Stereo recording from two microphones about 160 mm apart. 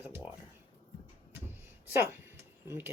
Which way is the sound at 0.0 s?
10° right (ahead or behind).